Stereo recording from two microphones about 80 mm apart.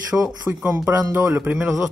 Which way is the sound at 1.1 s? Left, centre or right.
Right.